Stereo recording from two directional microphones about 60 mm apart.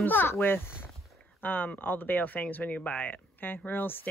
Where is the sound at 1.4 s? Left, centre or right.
Left.